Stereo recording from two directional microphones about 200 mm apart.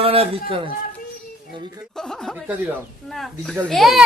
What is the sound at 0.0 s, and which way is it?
Speech, 30° right (ahead or behind).